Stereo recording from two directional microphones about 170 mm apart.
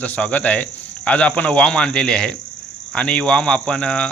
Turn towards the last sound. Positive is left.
turn(degrees=5)  # may be behind; listen again after turning